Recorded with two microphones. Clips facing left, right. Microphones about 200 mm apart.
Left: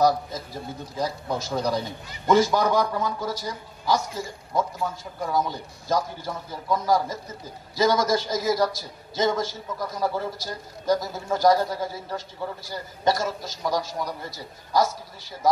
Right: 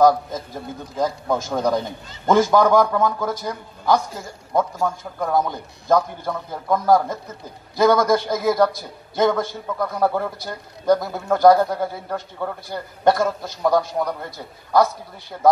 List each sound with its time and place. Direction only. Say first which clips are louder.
0.0 s a man's voice: right 5 dB; 50° right (ahead or behind)